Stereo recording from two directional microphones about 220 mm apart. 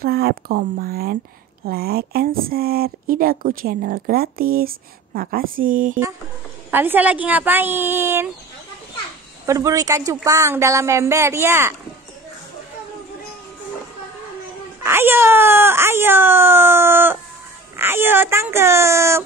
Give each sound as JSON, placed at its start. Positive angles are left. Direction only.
{"t": 0.0, "sound": "speech", "side_deg": -45}
{"t": 6.7, "sound": "speech", "side_deg": -10}
{"t": 9.5, "sound": "speech", "side_deg": -15}
{"t": 14.8, "sound": "speech", "side_deg": -10}